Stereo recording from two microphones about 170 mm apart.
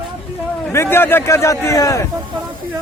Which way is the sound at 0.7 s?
15° left (ahead or behind).